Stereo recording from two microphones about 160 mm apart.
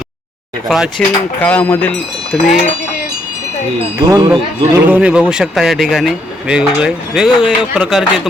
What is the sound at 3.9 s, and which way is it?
Speech, 15° right (ahead or behind).